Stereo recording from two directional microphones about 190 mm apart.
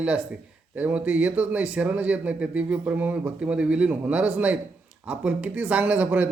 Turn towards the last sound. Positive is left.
turn(degrees=-5)  # may be behind; listen again after turning